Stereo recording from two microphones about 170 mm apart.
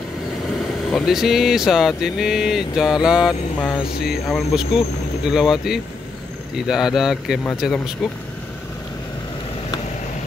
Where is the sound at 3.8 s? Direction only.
65° left (ahead or behind).